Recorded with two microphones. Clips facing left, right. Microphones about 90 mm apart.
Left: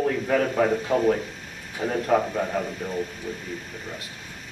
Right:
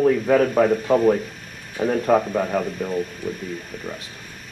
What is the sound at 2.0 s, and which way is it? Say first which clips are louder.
Speech: right 2 dB; 15° right (ahead or behind).